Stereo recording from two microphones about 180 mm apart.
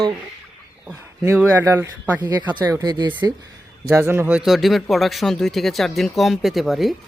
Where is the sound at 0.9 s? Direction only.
10° right (ahead or behind).